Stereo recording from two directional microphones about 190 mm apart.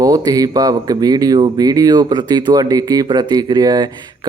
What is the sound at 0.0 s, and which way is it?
Speech, 20° right (ahead or behind).